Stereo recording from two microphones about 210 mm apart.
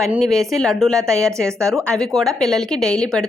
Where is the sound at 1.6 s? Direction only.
15° right (ahead or behind).